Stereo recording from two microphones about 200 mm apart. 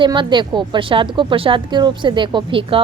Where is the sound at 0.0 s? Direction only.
25° right (ahead or behind).